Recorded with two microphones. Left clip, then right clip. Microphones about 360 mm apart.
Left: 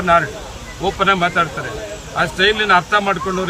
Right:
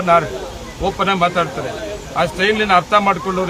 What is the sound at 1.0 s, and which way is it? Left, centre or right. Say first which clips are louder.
Speech: left 1 dB; centre.